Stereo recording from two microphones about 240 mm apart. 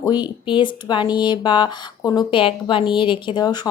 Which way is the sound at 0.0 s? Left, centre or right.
Centre.